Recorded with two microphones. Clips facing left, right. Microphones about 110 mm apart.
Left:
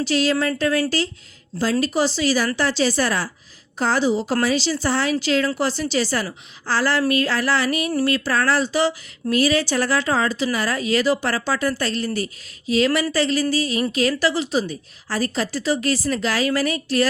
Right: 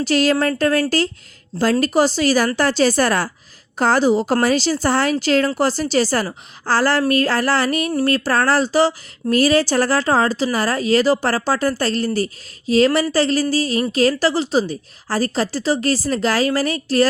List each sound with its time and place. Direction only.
0.0 s a woman's voice: 50° right (ahead or behind)